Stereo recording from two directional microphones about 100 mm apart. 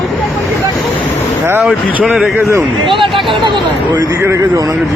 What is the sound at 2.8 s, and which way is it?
Speech, 55° right (ahead or behind).